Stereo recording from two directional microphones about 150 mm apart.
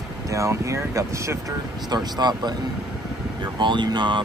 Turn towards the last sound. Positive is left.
turn(degrees=-30)  # may be behind; listen again after turning